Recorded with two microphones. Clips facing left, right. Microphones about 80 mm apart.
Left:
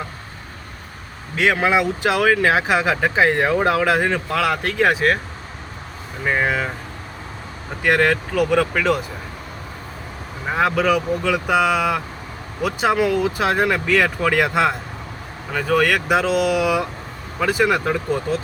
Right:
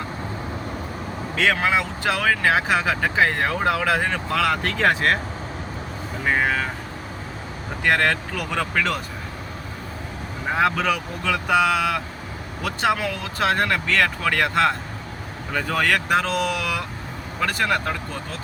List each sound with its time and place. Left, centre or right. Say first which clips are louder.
1.4 s speech: left 4 dB; centre
6.2 s speech: left 2 dB; centre
7.9 s speech: left 3 dB; centre
10.5 s speech: left 3 dB; centre